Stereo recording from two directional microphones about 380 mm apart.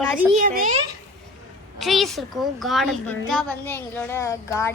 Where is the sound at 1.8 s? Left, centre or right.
Centre.